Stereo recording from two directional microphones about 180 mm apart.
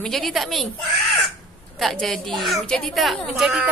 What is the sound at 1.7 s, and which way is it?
A woman's voice, centre (ahead or behind).